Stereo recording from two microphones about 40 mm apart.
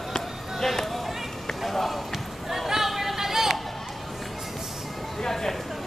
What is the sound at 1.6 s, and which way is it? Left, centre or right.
Basketball bounce, centre.